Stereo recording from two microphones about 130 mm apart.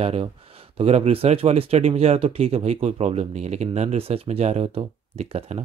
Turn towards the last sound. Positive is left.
turn(degrees=-55)  # may be behind; listen again after turning